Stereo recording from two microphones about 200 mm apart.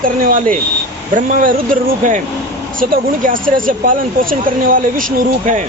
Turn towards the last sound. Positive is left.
turn(degrees=-40)  # may be behind; listen again after turning